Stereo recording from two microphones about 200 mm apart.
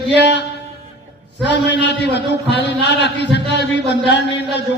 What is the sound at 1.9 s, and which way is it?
A man's voice, 60° left (ahead or behind).